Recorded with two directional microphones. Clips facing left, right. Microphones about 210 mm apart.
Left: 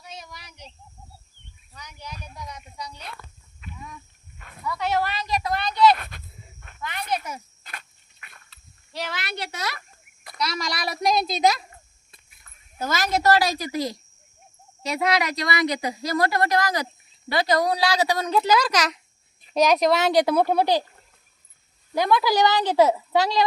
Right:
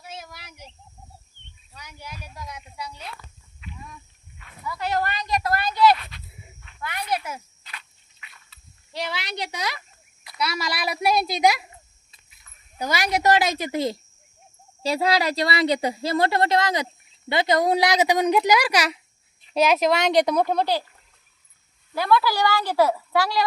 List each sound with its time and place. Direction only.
0.0 s a sound: 5° right (ahead or behind)
1.7 s a woman's voice: 10° right (ahead or behind)
3.6 s a sound: 45° left (ahead or behind)
4.6 s speech: centre (ahead or behind)
6.0 s a sound: 50° left (ahead or behind)
6.6 s snake: 50° left (ahead or behind)
7.1 s a woman's voice: 10° right (ahead or behind)
7.6 s dog: 50° left (ahead or behind)
9.0 s a woman's voice: 15° right (ahead or behind)
12.1 s a sound: 50° left (ahead or behind)
12.8 s a woman's voice: 15° right (ahead or behind); by 20.8 s 10° left (ahead or behind)
21.9 s a woman's voice: 15° left (ahead or behind)